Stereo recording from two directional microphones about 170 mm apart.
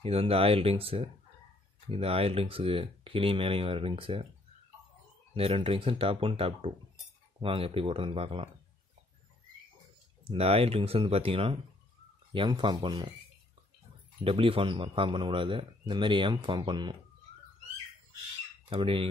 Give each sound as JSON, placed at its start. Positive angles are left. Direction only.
{"t": 0.0, "sound": "speech", "side_deg": -35}
{"t": 5.3, "sound": "speech", "side_deg": -35}
{"t": 10.2, "sound": "speech", "side_deg": -35}
{"t": 14.2, "sound": "speech", "side_deg": -35}
{"t": 18.7, "sound": "speech", "side_deg": -30}